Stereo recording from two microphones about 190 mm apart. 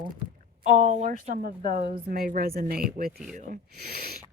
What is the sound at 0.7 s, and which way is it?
A woman's voice, 40° right (ahead or behind).